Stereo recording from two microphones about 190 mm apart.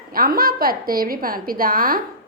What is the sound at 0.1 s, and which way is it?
A woman's voice, 50° right (ahead or behind).